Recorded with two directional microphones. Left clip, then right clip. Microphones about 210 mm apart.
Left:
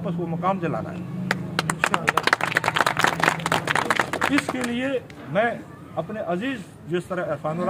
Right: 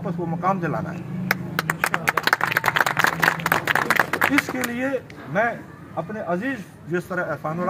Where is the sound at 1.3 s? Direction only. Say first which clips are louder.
Right 2 dB; 25° right (ahead or behind).